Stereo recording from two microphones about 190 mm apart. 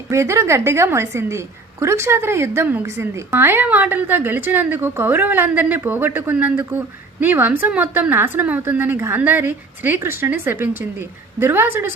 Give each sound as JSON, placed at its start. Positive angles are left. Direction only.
{"t": 0.1, "sound": "a woman's voice", "side_deg": -15}